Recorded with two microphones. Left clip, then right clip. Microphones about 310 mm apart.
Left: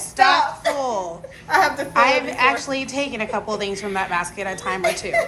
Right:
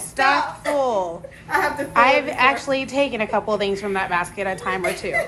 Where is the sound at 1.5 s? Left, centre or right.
Left.